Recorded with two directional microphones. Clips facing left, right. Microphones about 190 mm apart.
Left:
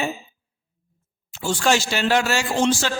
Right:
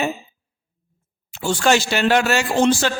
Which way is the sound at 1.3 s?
65° right (ahead or behind).